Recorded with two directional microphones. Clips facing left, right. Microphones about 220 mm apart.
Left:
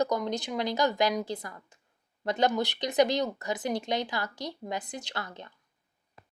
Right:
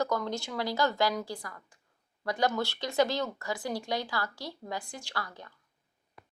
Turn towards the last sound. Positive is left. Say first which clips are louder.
# left 1 dB
turn(degrees=25)  # may be behind; listen again after turning